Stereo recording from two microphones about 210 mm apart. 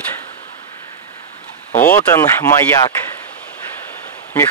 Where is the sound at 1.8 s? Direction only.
10° left (ahead or behind).